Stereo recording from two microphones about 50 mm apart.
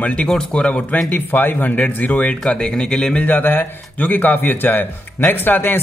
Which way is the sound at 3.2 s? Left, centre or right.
Left.